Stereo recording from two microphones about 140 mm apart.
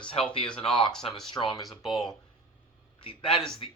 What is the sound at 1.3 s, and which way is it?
Speech, 35° left (ahead or behind).